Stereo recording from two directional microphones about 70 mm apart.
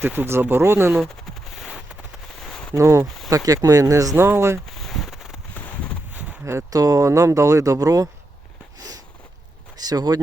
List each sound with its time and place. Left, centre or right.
0.2 s speech: right
2.7 s speech: right
4.8 s a sound: centre
6.4 s speech: right
6.7 s speech: right
9.8 s speech: right